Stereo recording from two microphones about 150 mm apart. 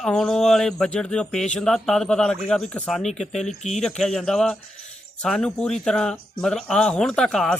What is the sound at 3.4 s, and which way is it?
Speech, 50° left (ahead or behind).